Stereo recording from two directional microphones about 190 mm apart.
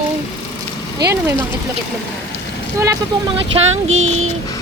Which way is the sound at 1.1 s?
15° right (ahead or behind).